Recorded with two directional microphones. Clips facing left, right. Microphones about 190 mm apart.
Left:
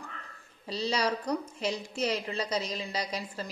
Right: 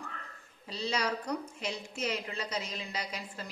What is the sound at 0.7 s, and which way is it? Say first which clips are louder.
A woman's voice: left 4 dB; 35° left (ahead or behind).